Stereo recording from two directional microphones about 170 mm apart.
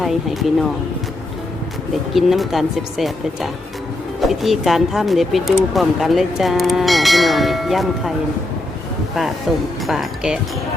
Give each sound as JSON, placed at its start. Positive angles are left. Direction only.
{"t": 0.0, "sound": "speech", "side_deg": 0}
{"t": 2.1, "sound": "speech", "side_deg": 0}
{"t": 9.5, "sound": "speech", "side_deg": 0}